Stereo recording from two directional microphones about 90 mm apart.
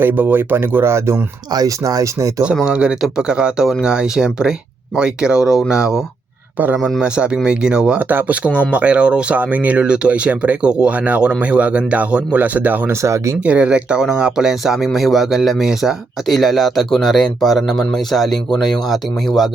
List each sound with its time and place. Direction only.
0.0 s speech: 20° right (ahead or behind)
1.5 s speech: 40° right (ahead or behind)
2.6 s speech: 10° right (ahead or behind)
7.4 s speech: 10° right (ahead or behind)
13.0 s speech: 35° right (ahead or behind)
13.4 s speech: 15° right (ahead or behind)